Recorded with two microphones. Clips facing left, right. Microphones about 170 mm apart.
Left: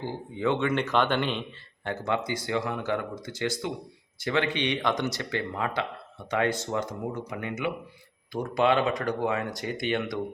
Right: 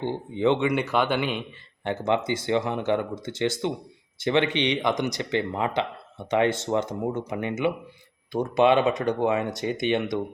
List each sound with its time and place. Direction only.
0.0 s a man's voice: 25° right (ahead or behind)
1.9 s speech: 25° right (ahead or behind)